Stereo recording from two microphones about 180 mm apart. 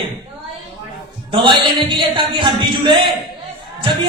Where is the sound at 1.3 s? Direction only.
25° right (ahead or behind).